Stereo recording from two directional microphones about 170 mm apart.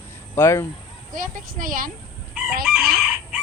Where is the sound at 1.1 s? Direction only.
50° right (ahead or behind).